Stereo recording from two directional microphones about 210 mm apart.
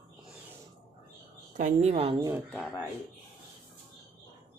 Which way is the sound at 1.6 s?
35° right (ahead or behind).